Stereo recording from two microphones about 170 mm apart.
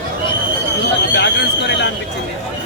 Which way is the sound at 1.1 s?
90° left.